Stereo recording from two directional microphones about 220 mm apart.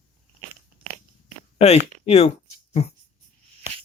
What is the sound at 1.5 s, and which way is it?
Speech, 30° left (ahead or behind).